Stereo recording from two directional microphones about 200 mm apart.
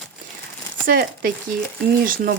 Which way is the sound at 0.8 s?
50° right (ahead or behind).